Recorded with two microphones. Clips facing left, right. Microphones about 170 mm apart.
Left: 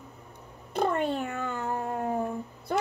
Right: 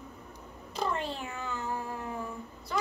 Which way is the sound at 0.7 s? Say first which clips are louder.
Left 7 dB; 55° left (ahead or behind).